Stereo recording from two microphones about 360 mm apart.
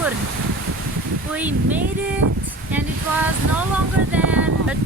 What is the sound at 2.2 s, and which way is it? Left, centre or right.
Speech, right.